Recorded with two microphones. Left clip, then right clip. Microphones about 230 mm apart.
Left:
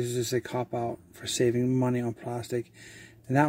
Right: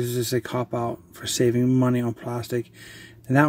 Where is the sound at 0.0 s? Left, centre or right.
Centre.